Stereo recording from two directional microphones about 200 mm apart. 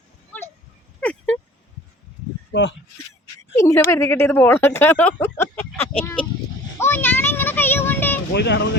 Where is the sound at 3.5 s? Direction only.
15° left (ahead or behind).